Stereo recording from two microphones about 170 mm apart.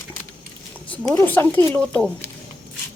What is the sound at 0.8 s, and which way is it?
Speech, 10° left (ahead or behind).